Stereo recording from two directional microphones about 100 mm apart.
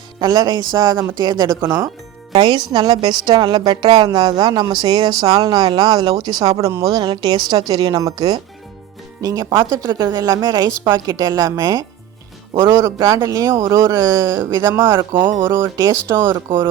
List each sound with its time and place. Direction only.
0.2 s a woman's voice: 40° right (ahead or behind)
1.6 s speech: 25° right (ahead or behind)
2.4 s a woman's voice: 50° right (ahead or behind); by 6.8 s 35° right (ahead or behind)
6.9 s a woman's voice: 50° right (ahead or behind); by 15.7 s 25° right (ahead or behind)
15.8 s a woman's voice: 35° right (ahead or behind)